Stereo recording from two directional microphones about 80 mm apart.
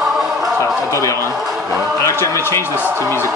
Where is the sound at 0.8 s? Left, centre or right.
Left.